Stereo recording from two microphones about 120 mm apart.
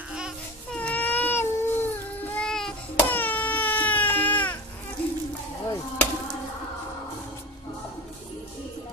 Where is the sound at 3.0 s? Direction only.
15° left (ahead or behind).